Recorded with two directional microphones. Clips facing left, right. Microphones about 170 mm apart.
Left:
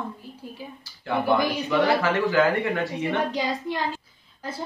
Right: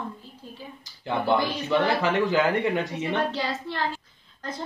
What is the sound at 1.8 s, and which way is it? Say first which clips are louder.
Speech: left 1 dB; 20° right (ahead or behind).